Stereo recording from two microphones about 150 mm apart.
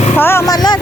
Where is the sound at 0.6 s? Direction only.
25° left (ahead or behind).